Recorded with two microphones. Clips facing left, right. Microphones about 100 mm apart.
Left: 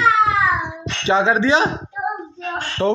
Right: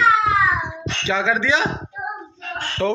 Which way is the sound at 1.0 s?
35° left (ahead or behind).